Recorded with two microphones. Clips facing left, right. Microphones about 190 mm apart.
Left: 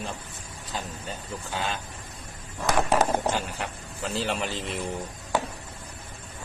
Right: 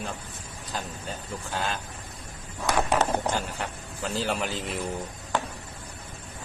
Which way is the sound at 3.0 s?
5° left (ahead or behind).